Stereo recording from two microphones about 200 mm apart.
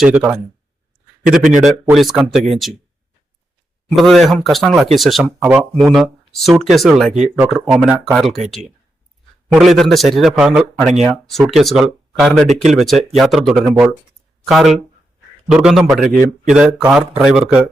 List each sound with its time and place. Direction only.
0.0 s a man's voice: 5° right (ahead or behind)
1.6 s a man's voice: centre (ahead or behind)
3.8 s a man's voice: centre (ahead or behind)
9.5 s a man's voice: centre (ahead or behind)